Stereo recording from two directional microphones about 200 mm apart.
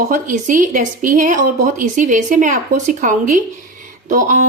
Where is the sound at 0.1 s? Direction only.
40° right (ahead or behind).